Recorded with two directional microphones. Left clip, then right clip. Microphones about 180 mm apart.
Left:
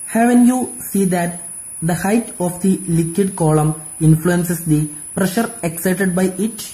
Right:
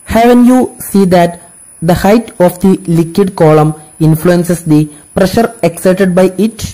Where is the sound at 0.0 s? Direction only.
35° right (ahead or behind).